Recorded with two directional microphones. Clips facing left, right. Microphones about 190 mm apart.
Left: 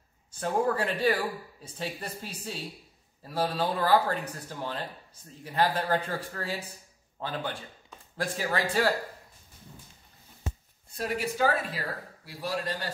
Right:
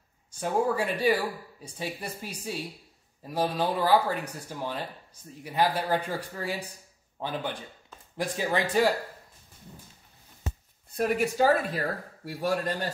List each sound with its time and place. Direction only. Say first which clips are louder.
0.3 s speech: right 1 dB; 10° right (ahead or behind)
11.0 s a man's voice: right 6 dB; 50° right (ahead or behind)
11.3 s speech: right 2 dB; 40° right (ahead or behind)
12.3 s a man's voice: right 5 dB; 50° right (ahead or behind)